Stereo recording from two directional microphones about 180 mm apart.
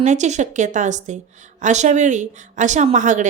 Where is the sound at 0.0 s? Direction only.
40° right (ahead or behind).